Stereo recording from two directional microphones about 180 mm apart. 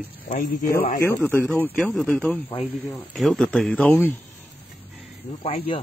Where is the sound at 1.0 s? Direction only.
10° left (ahead or behind).